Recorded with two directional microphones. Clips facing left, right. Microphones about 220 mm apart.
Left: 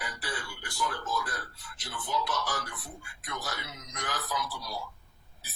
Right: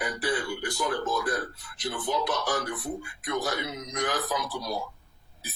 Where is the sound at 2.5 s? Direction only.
20° right (ahead or behind).